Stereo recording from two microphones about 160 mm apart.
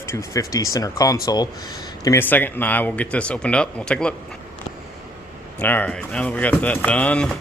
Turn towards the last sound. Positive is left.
turn(degrees=5)  # may be behind; listen again after turning